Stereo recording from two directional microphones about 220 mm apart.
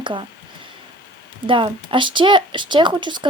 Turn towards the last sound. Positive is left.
turn(degrees=-20)  # may be behind; listen again after turning